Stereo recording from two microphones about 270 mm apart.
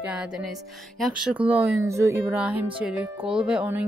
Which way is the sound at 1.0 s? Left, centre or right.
Centre.